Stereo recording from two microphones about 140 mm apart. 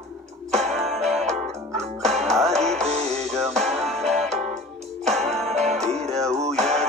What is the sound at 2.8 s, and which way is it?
Music, 50° right (ahead or behind).